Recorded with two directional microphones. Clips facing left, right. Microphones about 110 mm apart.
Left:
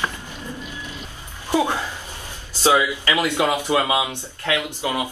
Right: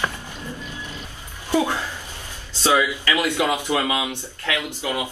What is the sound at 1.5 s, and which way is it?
Speech, 20° left (ahead or behind).